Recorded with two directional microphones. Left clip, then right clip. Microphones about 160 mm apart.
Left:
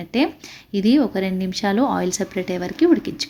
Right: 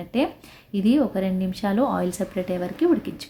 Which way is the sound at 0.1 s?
15° left (ahead or behind).